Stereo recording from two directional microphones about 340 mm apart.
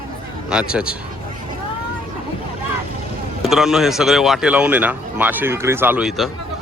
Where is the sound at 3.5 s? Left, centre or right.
Centre.